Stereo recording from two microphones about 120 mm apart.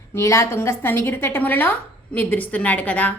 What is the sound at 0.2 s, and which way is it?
A woman's voice, 25° left (ahead or behind).